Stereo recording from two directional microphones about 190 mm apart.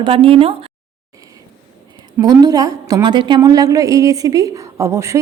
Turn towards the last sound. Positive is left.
turn(degrees=-15)  # may be behind; listen again after turning